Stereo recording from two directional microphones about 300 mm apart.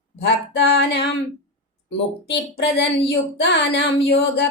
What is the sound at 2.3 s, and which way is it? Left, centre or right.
Speech, left.